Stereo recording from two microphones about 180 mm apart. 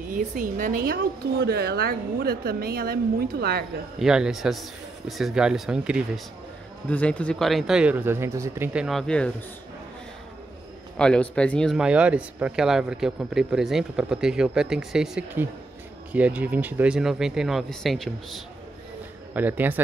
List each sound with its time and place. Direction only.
0.1 s a woman's voice: 50° right (ahead or behind)
1.4 s a woman's voice: 65° right (ahead or behind)
4.0 s speech: 5° right (ahead or behind)
6.9 s speech: 5° left (ahead or behind); by 8.8 s 15° right (ahead or behind)
8.8 s speech: 5° left (ahead or behind)
11.0 s speech: 5° left (ahead or behind)
19.3 s speech: 10° right (ahead or behind)